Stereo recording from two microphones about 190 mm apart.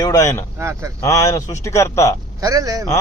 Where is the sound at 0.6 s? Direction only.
15° right (ahead or behind).